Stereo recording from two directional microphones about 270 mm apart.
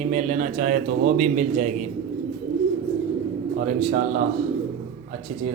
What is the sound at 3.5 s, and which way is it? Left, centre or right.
Speech, right.